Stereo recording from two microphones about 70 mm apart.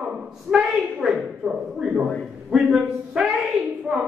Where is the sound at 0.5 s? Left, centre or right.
Centre.